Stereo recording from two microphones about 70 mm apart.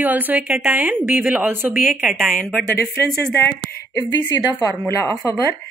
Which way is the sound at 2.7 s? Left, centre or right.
Left.